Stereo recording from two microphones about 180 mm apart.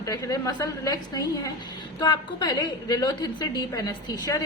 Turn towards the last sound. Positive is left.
turn(degrees=20)  # may be behind; listen again after turning